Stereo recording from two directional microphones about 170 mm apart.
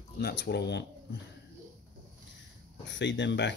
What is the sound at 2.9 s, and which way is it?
Speech, 90° left.